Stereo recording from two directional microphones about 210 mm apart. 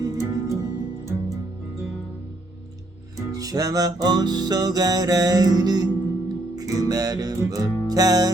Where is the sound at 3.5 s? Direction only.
20° right (ahead or behind).